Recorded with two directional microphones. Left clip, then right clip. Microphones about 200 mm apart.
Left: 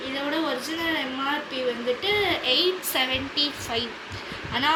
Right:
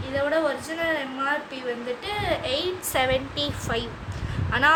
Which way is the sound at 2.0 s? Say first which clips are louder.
Left 3 dB; 20° right (ahead or behind).